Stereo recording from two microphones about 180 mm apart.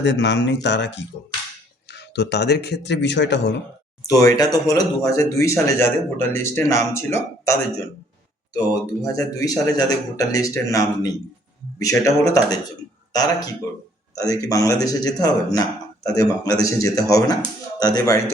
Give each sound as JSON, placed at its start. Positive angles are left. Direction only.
{"t": 0.0, "sound": "speech", "side_deg": 80}
{"t": 4.2, "sound": "a man's voice", "side_deg": 20}